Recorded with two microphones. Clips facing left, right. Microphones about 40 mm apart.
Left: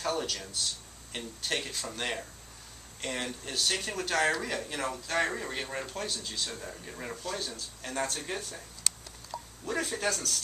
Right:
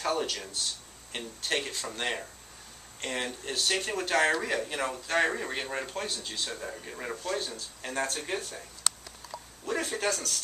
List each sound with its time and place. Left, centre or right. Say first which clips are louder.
0.0 s speech: right 2 dB; centre
9.3 s a sound: left 3 dB; centre
9.7 s speech: right 1 dB; centre